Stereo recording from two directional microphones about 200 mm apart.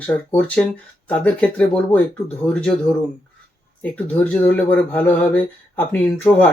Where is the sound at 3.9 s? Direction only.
5° left (ahead or behind).